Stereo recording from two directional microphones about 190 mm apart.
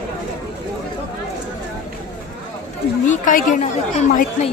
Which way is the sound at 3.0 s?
40° left (ahead or behind).